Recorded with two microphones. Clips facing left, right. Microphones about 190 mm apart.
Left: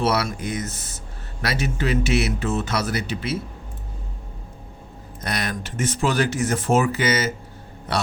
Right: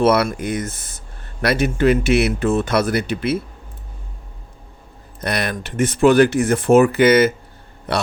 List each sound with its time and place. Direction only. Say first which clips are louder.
0.0 s speech: right 7 dB; 55° right (ahead or behind)
5.2 s speech: right 5 dB; 60° right (ahead or behind)